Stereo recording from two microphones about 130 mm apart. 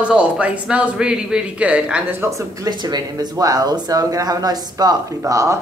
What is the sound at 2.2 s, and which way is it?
Speech, 25° right (ahead or behind).